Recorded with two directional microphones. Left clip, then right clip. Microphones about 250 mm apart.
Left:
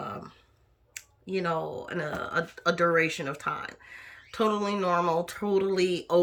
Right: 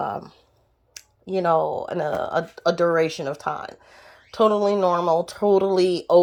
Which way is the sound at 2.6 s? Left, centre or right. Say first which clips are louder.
Right 4 dB; centre.